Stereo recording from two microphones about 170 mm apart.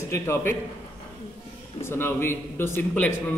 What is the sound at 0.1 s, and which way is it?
Speech, 15° left (ahead or behind).